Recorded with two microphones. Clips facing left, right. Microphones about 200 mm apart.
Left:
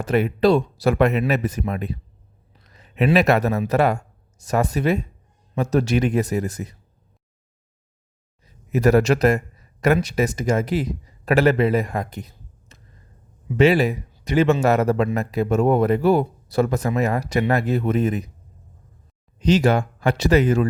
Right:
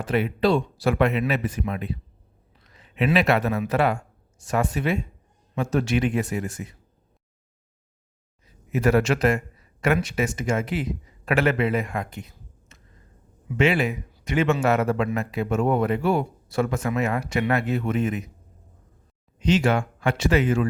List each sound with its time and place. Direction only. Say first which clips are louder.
0.0 s speech: left 4 dB; 45° left (ahead or behind)
8.7 s speech: left 4 dB; 40° left (ahead or behind)
19.4 s speech: left 3 dB; 40° left (ahead or behind)